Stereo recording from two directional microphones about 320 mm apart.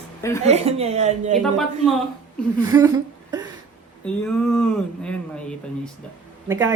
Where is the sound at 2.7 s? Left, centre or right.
Centre.